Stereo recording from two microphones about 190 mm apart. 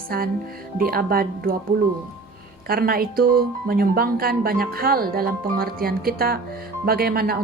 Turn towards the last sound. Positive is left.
turn(degrees=-55)  # may be behind; listen again after turning